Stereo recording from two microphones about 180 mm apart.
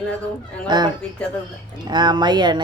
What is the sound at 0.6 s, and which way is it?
Speech, 25° right (ahead or behind).